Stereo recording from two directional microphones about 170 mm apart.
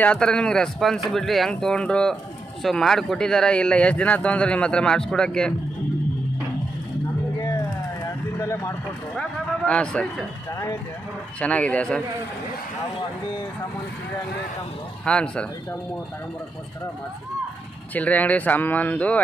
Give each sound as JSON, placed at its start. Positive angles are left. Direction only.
{"t": 0.0, "sound": "speech", "side_deg": 5}
{"t": 7.3, "sound": "vehicle", "side_deg": 20}
{"t": 9.7, "sound": "speech", "side_deg": 5}
{"t": 15.0, "sound": "speech", "side_deg": 5}
{"t": 17.9, "sound": "speech", "side_deg": 10}